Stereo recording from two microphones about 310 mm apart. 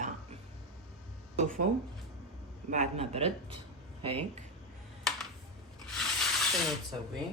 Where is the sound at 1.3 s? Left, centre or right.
Right.